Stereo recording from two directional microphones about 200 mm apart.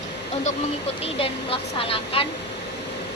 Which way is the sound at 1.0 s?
30° left (ahead or behind).